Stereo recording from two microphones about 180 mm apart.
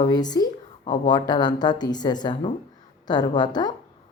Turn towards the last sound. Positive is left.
turn(degrees=25)  # may be behind; listen again after turning